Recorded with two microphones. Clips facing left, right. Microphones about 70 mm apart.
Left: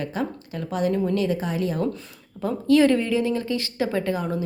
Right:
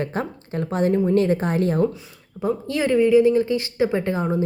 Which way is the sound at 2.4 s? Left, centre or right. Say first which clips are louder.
Left 5 dB; centre.